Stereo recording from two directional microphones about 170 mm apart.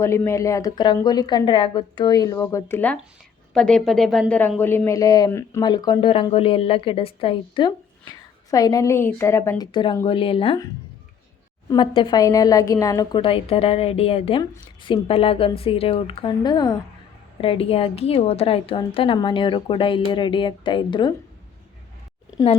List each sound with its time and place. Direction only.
0.0 s speech: 15° left (ahead or behind)
11.7 s speech: 25° left (ahead or behind)